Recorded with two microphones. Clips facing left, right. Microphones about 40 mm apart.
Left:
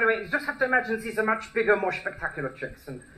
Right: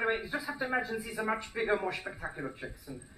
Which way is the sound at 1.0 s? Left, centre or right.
Left.